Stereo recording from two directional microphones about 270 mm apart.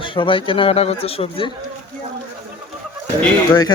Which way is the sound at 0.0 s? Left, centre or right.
Centre.